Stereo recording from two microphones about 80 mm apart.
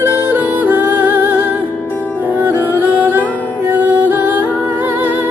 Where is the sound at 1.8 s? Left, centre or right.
Left.